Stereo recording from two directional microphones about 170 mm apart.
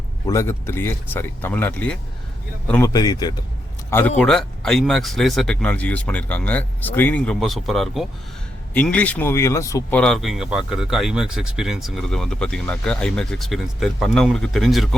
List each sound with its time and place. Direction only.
0.3 s speech: 15° left (ahead or behind)
2.9 s speech: 20° left (ahead or behind)
10.0 s speech: centre (ahead or behind)